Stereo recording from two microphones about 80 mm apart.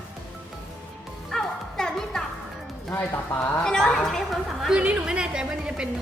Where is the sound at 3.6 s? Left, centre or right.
Centre.